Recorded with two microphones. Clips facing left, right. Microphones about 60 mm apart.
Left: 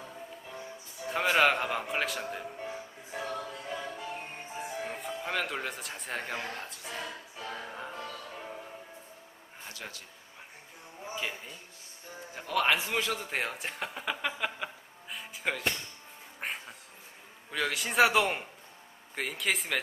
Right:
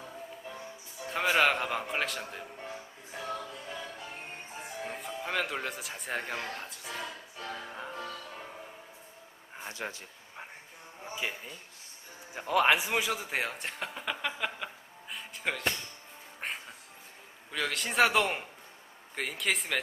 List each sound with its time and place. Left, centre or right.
1.0 s music: centre
4.6 s music: centre
9.7 s speech: right
11.1 s a man's voice: centre
16.4 s cat: centre
17.5 s a man's voice: centre